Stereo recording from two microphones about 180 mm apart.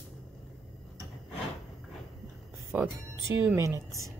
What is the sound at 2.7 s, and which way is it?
A woman's voice, 10° right (ahead or behind).